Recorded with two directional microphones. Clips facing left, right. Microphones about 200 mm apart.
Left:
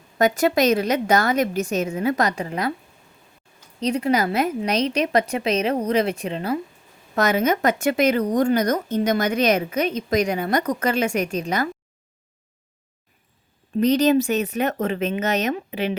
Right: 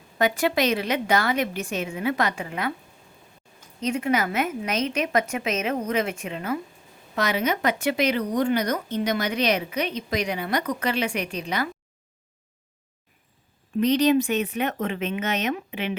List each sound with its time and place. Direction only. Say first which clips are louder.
0.2 s a woman's voice: left 4 dB; 40° left (ahead or behind)
3.8 s a woman's voice: left 3 dB; 35° left (ahead or behind)
7.2 s speech: left 5 dB; 45° left (ahead or behind)
13.7 s a woman's voice: left 2 dB; 40° left (ahead or behind)